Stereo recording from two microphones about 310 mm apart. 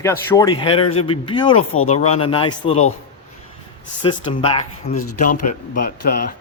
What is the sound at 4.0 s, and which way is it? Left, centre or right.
A man's voice, centre.